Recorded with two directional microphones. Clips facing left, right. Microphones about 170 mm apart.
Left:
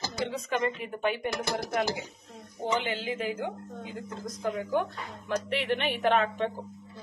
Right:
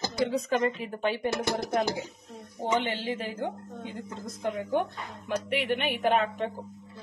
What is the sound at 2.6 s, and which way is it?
A woman's voice, 35° right (ahead or behind).